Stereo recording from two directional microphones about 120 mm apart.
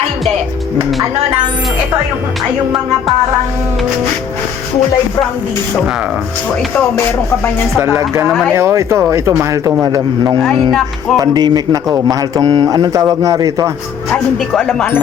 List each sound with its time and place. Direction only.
7.8 s a man's voice: 25° right (ahead or behind)
8.3 s speech: centre (ahead or behind)
8.5 s a man's voice: 25° right (ahead or behind)
10.7 s speech: 5° left (ahead or behind)
11.2 s a man's voice: 35° right (ahead or behind)
14.5 s speech: centre (ahead or behind)